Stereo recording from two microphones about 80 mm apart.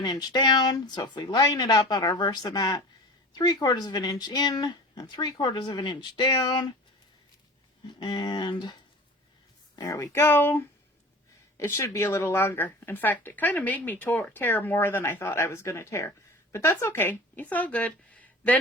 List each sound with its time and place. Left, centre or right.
0.0 s speech: left
7.9 s speech: left
9.7 s speech: left; by 18.6 s centre